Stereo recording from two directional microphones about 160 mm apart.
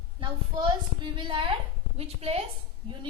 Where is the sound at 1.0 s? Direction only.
30° right (ahead or behind).